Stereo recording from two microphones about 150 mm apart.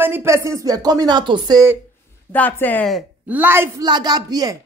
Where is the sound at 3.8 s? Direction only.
30° right (ahead or behind).